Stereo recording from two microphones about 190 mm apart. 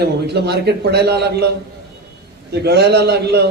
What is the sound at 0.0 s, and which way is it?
A man's voice, 60° right (ahead or behind).